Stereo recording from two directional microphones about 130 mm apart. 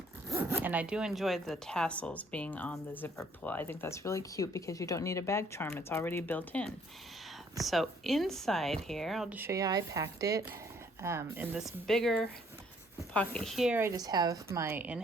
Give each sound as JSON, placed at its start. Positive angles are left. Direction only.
{"t": 0.3, "sound": "speech", "side_deg": -20}
{"t": 7.6, "sound": "speech", "side_deg": 0}
{"t": 9.3, "sound": "speech", "side_deg": -15}
{"t": 9.6, "sound": "a woman's voice", "side_deg": -30}
{"t": 11.5, "sound": "speech", "side_deg": 0}
{"t": 13.9, "sound": "a woman's voice", "side_deg": -30}